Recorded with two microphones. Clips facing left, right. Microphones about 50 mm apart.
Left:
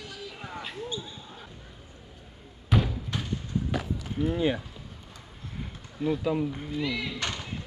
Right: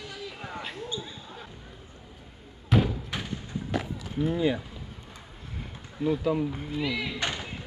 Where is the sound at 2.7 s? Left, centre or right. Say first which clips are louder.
Right 2 dB; centre.